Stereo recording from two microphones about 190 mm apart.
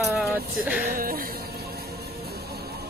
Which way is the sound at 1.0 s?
50° right (ahead or behind).